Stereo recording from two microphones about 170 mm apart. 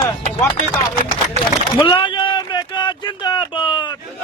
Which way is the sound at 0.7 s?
25° left (ahead or behind).